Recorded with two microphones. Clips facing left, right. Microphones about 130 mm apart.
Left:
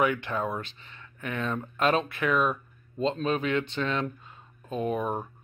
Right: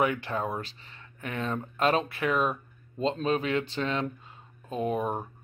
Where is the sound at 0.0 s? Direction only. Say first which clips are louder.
Left 1 dB; 30° right (ahead or behind).